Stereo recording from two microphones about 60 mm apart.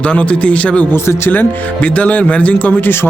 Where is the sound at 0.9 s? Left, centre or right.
Left.